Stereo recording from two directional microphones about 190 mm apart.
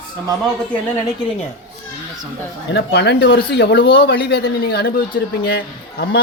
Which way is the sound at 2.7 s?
60° left (ahead or behind).